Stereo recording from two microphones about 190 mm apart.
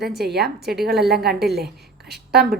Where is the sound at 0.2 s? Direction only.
55° right (ahead or behind).